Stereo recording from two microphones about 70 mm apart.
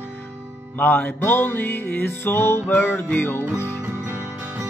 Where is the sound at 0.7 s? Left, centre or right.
Left.